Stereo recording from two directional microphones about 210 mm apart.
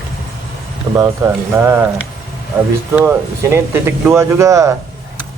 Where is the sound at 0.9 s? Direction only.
15° right (ahead or behind).